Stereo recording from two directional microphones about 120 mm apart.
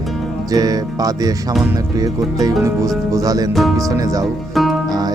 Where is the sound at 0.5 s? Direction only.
30° right (ahead or behind).